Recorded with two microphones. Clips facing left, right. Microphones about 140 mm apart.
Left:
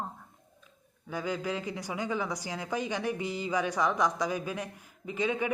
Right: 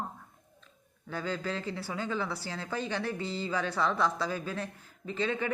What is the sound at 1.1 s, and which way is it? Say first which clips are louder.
Speech: left 1 dB; 15° left (ahead or behind).